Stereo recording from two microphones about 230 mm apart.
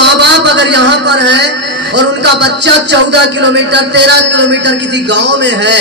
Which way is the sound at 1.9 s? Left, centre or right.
Right.